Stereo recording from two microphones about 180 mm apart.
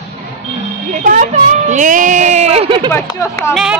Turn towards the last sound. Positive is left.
turn(degrees=-5)  # may be behind; listen again after turning